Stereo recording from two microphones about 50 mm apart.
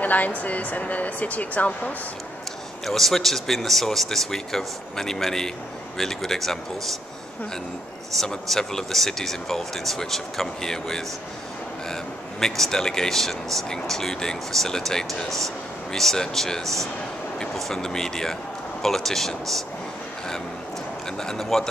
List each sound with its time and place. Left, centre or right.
0.0 s speech: left
2.8 s speech: centre
8.2 s speech: centre
21.2 s speech: centre